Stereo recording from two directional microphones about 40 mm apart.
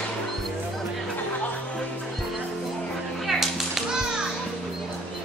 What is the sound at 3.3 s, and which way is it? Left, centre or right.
Children playing, centre.